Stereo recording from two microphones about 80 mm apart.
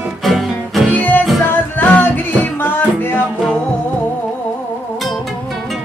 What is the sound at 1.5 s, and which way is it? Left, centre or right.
Music, left.